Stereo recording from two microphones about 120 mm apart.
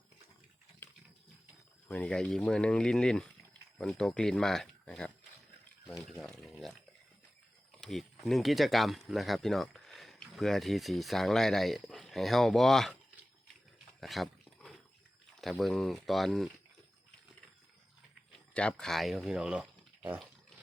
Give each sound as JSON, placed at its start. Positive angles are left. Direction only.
{"t": 0.8, "sound": "a sound", "side_deg": 20}
{"t": 1.9, "sound": "speech", "side_deg": 10}
{"t": 7.8, "sound": "speech", "side_deg": 0}
{"t": 14.0, "sound": "a sound", "side_deg": 0}
{"t": 15.4, "sound": "speech", "side_deg": 0}
{"t": 18.5, "sound": "speech", "side_deg": 5}